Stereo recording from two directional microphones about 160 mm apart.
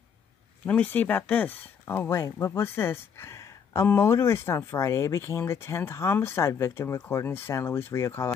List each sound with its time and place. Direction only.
0.7 s speech: 10° left (ahead or behind)